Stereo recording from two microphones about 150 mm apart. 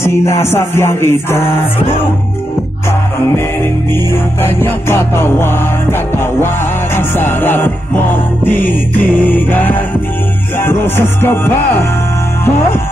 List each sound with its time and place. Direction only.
0.0 s music: 20° left (ahead or behind)
3.9 s music: 15° left (ahead or behind)